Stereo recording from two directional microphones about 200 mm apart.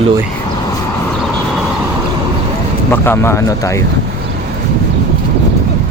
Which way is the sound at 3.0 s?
10° left (ahead or behind).